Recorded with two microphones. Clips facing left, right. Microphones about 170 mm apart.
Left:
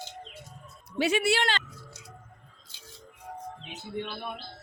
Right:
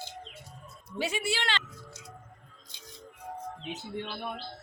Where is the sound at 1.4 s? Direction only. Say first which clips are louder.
Left 4 dB; 45° left (ahead or behind).